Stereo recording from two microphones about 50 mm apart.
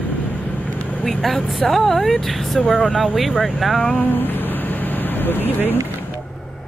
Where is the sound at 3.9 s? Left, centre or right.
Left.